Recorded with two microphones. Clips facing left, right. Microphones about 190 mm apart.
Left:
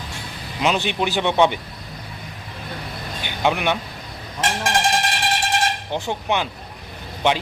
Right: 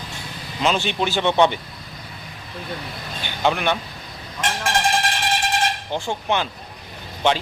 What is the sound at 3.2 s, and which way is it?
Speech, 10° left (ahead or behind).